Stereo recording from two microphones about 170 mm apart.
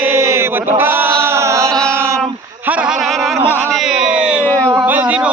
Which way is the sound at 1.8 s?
15° right (ahead or behind).